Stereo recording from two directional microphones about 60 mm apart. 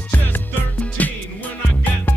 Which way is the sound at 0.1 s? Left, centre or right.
Left.